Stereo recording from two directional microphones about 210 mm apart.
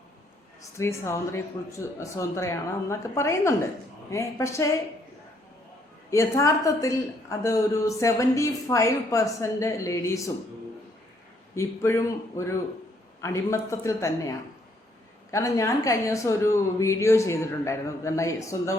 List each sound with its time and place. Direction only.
0.6 s a woman's voice: 15° left (ahead or behind)
6.1 s a woman's voice: 15° left (ahead or behind)
11.5 s a woman's voice: 10° left (ahead or behind)